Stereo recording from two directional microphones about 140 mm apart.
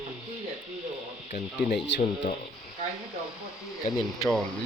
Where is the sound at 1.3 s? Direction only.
60° left (ahead or behind).